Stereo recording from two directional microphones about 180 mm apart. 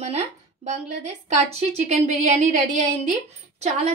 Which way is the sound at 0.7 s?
40° right (ahead or behind).